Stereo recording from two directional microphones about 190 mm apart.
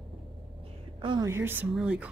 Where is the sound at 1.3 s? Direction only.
10° right (ahead or behind).